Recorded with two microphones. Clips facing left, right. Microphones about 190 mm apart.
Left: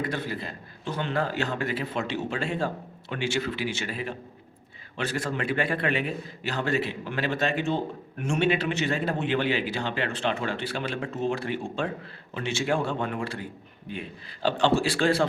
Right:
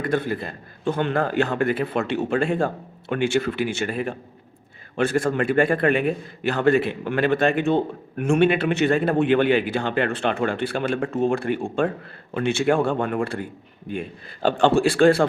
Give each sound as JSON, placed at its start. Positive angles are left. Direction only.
{"t": 0.0, "sound": "a man's voice", "side_deg": -55}